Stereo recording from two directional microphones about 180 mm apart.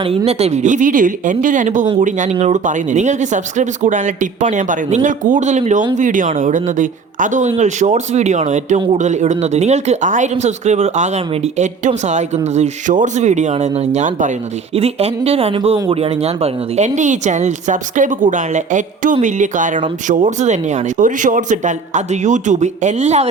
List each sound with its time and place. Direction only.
0.0 s speech: 30° right (ahead or behind)